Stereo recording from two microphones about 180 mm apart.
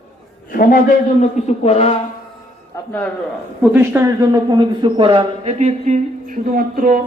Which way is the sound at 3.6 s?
10° right (ahead or behind).